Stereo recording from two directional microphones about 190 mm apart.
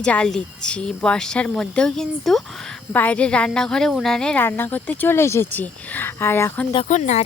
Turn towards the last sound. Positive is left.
turn(degrees=40)  # may be behind; listen again after turning